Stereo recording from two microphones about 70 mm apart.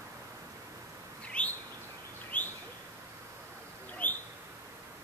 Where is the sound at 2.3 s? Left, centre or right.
Left.